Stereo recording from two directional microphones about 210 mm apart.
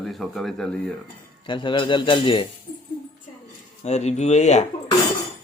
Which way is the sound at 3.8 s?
30° left (ahead or behind).